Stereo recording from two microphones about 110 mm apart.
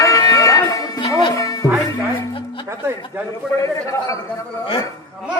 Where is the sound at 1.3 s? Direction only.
30° left (ahead or behind).